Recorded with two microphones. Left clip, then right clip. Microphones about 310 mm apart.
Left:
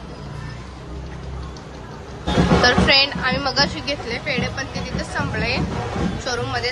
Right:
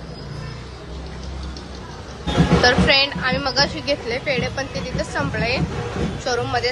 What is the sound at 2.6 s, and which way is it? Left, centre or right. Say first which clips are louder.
Speech: even; centre.